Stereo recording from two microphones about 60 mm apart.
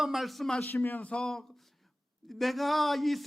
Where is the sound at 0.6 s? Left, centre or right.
Left.